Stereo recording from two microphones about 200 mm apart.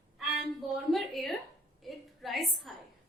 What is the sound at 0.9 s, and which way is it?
A woman's voice, centre (ahead or behind).